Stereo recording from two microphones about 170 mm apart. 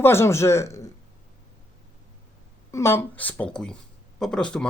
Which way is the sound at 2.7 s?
15° left (ahead or behind).